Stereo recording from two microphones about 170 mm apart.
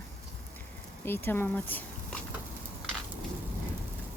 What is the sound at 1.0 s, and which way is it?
Speech, 10° left (ahead or behind).